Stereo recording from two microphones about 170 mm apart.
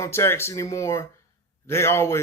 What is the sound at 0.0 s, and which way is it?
Speech, 15° left (ahead or behind).